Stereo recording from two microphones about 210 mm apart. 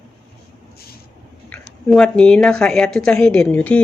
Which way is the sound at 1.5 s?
5° left (ahead or behind).